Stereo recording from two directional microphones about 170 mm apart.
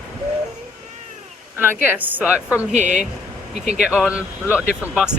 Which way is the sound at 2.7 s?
45° right (ahead or behind).